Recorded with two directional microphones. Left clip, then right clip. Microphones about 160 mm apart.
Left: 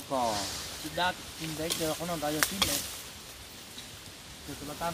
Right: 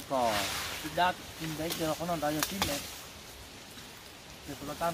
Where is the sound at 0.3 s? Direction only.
20° right (ahead or behind).